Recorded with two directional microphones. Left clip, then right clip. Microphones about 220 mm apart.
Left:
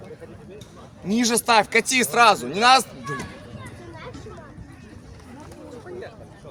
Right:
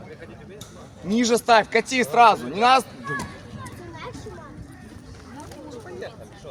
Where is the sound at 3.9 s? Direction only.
50° right (ahead or behind).